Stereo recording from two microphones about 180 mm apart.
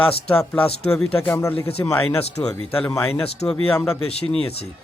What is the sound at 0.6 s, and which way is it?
Speech, 35° left (ahead or behind).